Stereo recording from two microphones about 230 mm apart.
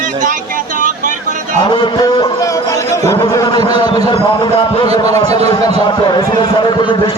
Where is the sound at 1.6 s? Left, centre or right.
Centre.